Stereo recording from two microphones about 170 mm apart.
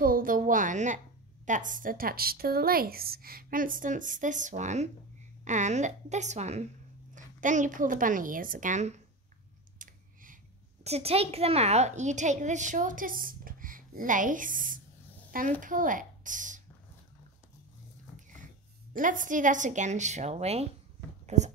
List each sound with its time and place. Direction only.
0.0 s a woman's voice: 55° right (ahead or behind)
10.8 s a woman's voice: 35° right (ahead or behind)
18.9 s a woman's voice: 50° right (ahead or behind)